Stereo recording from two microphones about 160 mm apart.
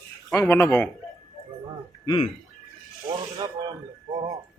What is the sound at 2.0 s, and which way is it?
Speech, 25° left (ahead or behind).